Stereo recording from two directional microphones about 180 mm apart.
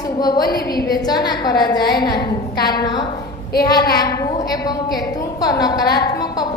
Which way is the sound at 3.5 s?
55° left (ahead or behind).